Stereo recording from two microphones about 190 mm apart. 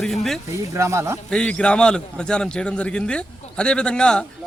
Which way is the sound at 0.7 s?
15° right (ahead or behind).